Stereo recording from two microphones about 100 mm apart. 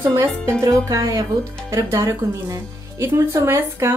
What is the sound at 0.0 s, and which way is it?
A woman's voice, 30° right (ahead or behind).